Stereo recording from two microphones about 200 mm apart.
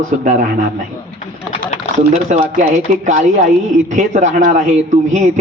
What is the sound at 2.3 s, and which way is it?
Speech, 35° right (ahead or behind).